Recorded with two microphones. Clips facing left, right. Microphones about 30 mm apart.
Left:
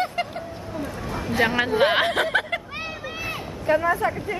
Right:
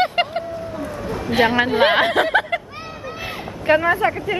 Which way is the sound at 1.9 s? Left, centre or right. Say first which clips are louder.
Right 4 dB; centre.